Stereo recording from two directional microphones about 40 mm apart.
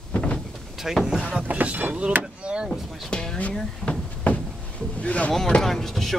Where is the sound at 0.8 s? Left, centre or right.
Centre.